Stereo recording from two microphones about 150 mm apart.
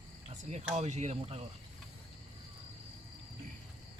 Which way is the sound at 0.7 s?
50° right (ahead or behind).